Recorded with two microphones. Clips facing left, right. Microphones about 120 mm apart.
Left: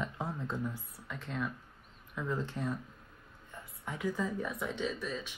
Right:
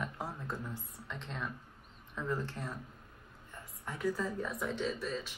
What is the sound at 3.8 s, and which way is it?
Speech, 15° left (ahead or behind).